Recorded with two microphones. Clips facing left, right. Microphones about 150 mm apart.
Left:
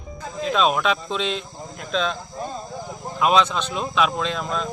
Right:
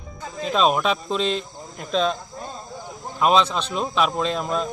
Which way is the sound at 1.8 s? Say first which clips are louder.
Right 2 dB; 40° right (ahead or behind).